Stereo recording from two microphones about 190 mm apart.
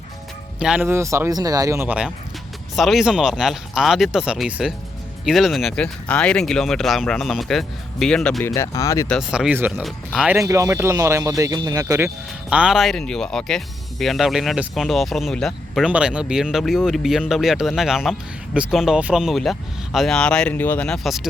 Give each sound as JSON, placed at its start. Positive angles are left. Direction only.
{"t": 0.6, "sound": "speech", "side_deg": -5}
{"t": 8.4, "sound": "speech", "side_deg": 15}
{"t": 9.0, "sound": "speech", "side_deg": 0}
{"t": 10.3, "sound": "speech", "side_deg": -15}